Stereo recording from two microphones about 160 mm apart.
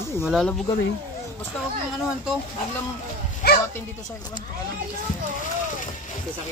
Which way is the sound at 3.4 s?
80° left.